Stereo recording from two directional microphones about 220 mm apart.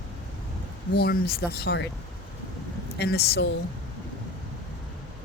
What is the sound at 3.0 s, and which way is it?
Speech, 45° left (ahead or behind).